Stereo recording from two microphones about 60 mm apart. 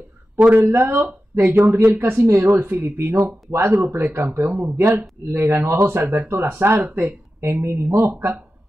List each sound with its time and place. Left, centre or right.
0.6 s speech: right
2.0 s speech: right
4.5 s speech: right
4.7 s speech: right
6.2 s speech: right
7.0 s speech: right